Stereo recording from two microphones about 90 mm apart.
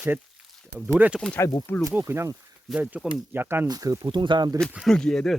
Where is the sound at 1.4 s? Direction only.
30° left (ahead or behind).